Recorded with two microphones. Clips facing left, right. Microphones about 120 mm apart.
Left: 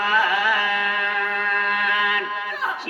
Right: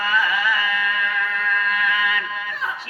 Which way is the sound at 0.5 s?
60° left (ahead or behind).